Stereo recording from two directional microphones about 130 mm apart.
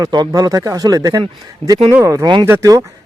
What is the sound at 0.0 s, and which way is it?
Speech, 30° right (ahead or behind).